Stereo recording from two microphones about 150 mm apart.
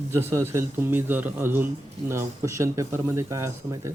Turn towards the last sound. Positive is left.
turn(degrees=-20)  # may be behind; listen again after turning